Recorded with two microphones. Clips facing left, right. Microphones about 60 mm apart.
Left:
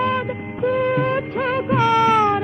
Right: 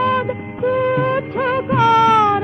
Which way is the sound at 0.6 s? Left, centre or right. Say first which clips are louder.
Right 2 dB; centre.